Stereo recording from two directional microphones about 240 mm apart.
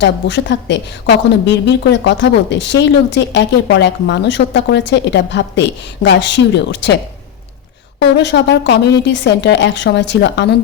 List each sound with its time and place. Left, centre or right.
0.0 s a woman's voice: left